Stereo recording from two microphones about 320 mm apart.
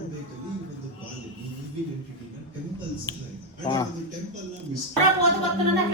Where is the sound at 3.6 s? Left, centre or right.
Centre.